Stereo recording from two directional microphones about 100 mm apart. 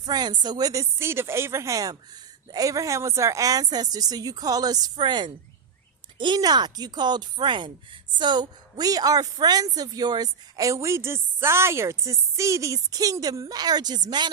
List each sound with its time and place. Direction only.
0.0 s a woman's voice: 45° right (ahead or behind)